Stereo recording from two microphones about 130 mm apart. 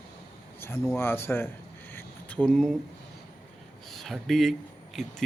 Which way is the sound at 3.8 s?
Centre (ahead or behind).